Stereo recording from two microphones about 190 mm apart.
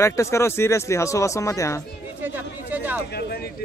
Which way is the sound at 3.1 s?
60° left (ahead or behind).